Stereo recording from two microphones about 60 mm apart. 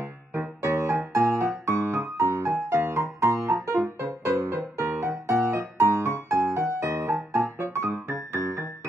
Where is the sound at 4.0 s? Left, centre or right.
Right.